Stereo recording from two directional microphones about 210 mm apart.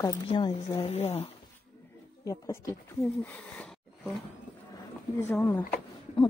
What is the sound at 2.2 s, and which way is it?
Speech, 15° left (ahead or behind).